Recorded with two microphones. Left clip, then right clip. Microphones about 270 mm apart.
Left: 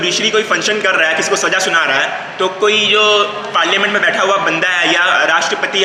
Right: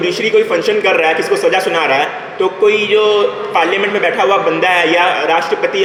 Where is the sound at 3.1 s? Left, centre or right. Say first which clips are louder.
Right 1 dB; centre.